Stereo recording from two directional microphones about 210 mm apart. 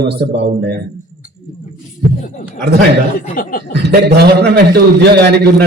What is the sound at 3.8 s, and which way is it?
A man's voice, 50° right (ahead or behind).